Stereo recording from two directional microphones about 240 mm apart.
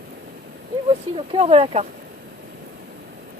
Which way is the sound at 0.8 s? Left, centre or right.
Right.